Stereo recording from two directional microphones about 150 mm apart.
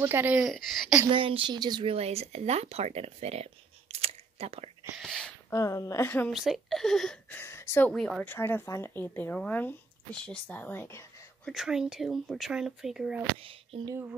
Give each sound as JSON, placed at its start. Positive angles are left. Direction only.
{"t": 0.0, "sound": "speech", "side_deg": -15}
{"t": 0.4, "sound": "speech", "side_deg": 0}
{"t": 1.1, "sound": "speech", "side_deg": -35}
{"t": 2.0, "sound": "speech", "side_deg": -45}
{"t": 3.9, "sound": "a sound", "side_deg": -40}
{"t": 4.9, "sound": "whispering", "side_deg": 0}
{"t": 5.5, "sound": "a woman's voice", "side_deg": 20}
{"t": 6.3, "sound": "speech", "side_deg": 0}
{"t": 7.9, "sound": "speech", "side_deg": 5}
{"t": 8.4, "sound": "speech", "side_deg": 15}
{"t": 11.4, "sound": "speech", "side_deg": -5}
{"t": 13.4, "sound": "speech", "side_deg": -40}
{"t": 13.8, "sound": "speech", "side_deg": -15}